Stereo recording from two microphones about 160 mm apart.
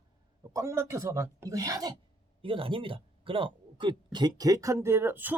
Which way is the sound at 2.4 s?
35° right (ahead or behind).